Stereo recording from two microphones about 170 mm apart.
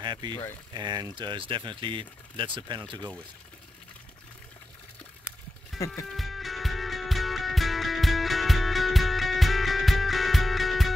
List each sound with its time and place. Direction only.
0.0 s speech: 25° right (ahead or behind)
5.7 s music: centre (ahead or behind)